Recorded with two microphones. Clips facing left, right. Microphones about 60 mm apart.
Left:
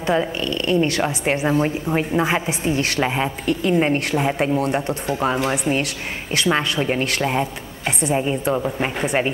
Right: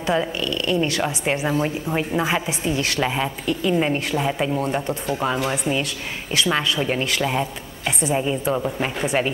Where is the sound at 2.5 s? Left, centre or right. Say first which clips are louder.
Left 2 dB; left.